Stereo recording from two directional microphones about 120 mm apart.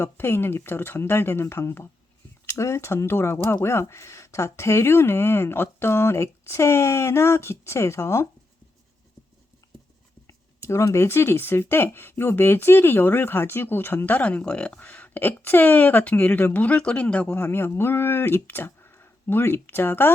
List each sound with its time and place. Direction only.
0.0 s speech: 20° left (ahead or behind)
10.2 s speech: 25° left (ahead or behind)